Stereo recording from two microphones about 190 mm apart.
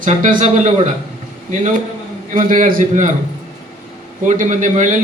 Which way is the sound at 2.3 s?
45° right (ahead or behind).